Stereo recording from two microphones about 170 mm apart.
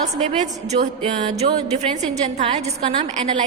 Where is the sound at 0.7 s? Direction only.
35° right (ahead or behind).